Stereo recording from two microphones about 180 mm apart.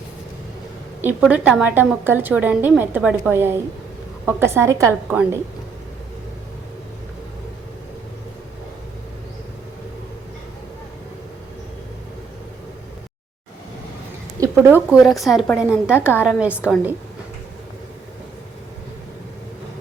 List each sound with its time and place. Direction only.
1.0 s a woman's voice: 5° right (ahead or behind)
14.3 s a sound: 20° right (ahead or behind)
14.8 s a woman's voice: centre (ahead or behind)